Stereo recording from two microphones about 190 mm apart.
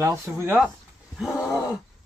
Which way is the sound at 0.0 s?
15° right (ahead or behind).